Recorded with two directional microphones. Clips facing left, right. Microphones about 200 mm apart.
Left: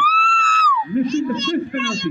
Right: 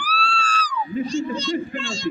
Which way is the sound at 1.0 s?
35° right (ahead or behind).